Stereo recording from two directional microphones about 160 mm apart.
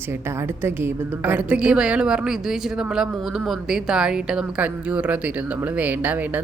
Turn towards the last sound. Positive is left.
turn(degrees=-10)  # may be behind; listen again after turning